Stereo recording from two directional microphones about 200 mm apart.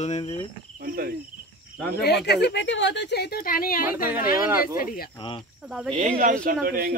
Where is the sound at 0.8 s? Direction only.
45° right (ahead or behind).